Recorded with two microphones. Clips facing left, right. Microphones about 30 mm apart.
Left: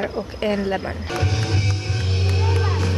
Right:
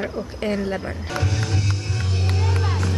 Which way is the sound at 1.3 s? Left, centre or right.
Left.